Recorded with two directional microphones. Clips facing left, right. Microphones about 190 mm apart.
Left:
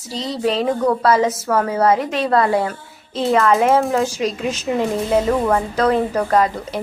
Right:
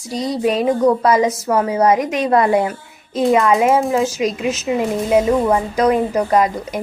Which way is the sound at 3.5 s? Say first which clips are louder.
Right 1 dB; centre (ahead or behind).